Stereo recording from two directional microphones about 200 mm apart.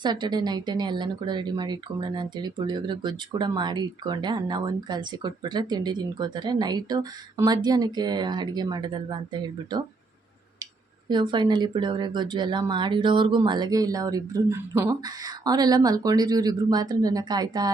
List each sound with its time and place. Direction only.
0.0 s speech: 20° right (ahead or behind)
11.1 s speech: 20° right (ahead or behind)